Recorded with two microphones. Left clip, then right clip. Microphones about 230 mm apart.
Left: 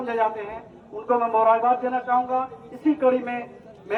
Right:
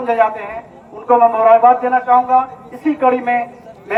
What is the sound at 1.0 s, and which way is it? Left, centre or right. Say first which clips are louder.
A man's voice: right 9 dB; right.